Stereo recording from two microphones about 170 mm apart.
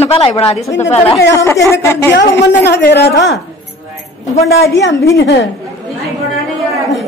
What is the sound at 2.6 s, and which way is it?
Speech, 80° left.